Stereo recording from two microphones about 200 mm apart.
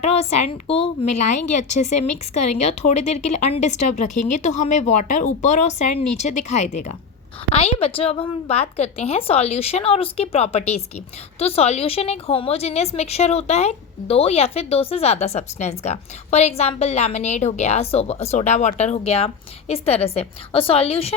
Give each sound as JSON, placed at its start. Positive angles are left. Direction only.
{"t": 0.0, "sound": "a woman's voice", "side_deg": 30}